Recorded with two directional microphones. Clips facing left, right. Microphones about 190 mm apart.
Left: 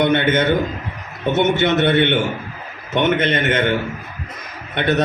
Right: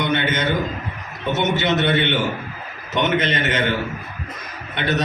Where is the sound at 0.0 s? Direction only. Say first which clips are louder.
Left 5 dB; 55° left (ahead or behind).